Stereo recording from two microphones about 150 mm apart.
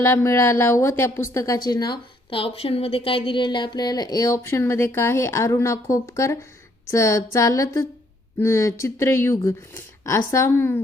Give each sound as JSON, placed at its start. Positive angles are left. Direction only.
{"t": 0.0, "sound": "a woman's voice", "side_deg": 20}
{"t": 1.6, "sound": "a woman's voice", "side_deg": 30}